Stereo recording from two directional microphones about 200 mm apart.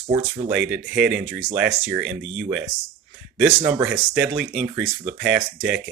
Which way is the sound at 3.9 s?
5° right (ahead or behind).